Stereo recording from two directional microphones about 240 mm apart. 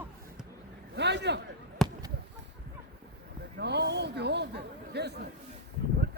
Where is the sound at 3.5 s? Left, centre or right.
Right.